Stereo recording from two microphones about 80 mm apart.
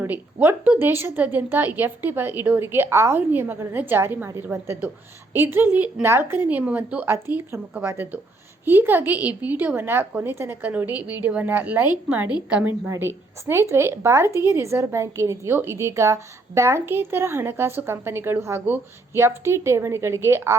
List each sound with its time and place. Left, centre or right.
0.1 s a woman's voice: right
7.1 s a woman's voice: right; by 12.7 s centre
13.4 s a woman's voice: right